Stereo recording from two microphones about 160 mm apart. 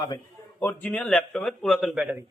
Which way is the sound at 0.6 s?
10° left (ahead or behind).